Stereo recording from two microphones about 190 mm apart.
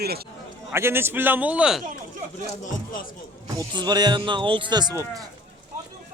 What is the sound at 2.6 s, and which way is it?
Speech, 45° left (ahead or behind).